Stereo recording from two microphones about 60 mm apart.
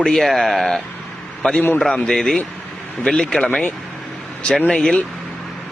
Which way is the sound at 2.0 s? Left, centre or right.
Centre.